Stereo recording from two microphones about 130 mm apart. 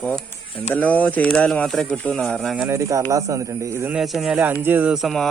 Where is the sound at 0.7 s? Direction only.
15° left (ahead or behind).